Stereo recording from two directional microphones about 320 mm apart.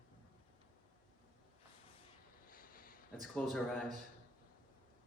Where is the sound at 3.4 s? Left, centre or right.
Centre.